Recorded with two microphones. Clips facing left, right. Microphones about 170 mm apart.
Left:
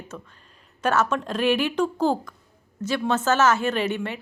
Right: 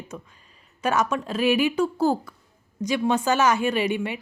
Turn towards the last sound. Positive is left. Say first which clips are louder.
# right 1 dB
turn(degrees=-10)  # may be behind; listen again after turning